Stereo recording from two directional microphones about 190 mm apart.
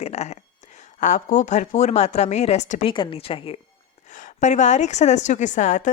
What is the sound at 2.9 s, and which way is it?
Speech, 25° left (ahead or behind).